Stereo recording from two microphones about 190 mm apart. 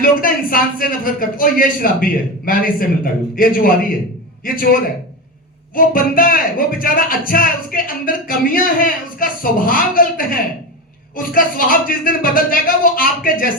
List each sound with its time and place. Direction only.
0.0 s speech: 50° left (ahead or behind)